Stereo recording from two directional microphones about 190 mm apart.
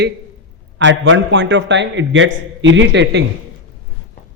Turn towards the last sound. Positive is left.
turn(degrees=-70)  # may be behind; listen again after turning